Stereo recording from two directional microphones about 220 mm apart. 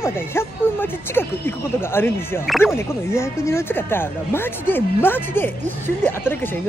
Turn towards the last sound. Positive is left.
turn(degrees=10)  # may be behind; listen again after turning